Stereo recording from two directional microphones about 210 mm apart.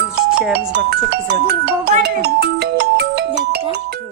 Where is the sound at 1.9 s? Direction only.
45° right (ahead or behind).